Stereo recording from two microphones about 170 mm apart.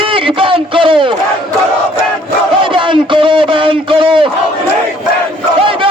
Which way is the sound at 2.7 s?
30° right (ahead or behind).